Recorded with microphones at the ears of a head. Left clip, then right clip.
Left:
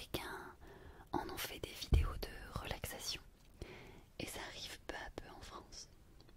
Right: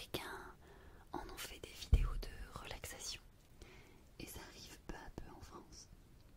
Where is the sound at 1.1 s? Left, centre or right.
Left.